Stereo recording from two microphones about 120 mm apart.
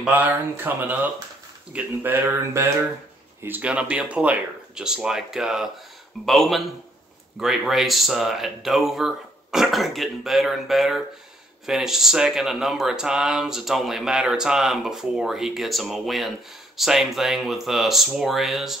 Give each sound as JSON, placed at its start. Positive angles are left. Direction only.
{"t": 0.0, "sound": "speech", "side_deg": -15}